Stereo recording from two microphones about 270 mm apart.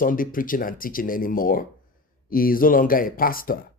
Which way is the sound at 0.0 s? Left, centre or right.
Left.